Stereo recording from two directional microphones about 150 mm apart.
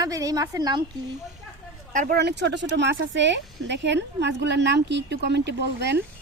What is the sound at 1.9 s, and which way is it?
Speech, 65° right (ahead or behind).